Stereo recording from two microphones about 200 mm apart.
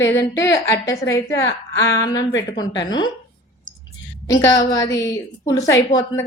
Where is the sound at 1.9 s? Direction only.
20° left (ahead or behind).